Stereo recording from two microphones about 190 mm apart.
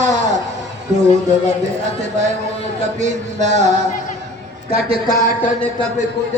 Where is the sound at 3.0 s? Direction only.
40° right (ahead or behind).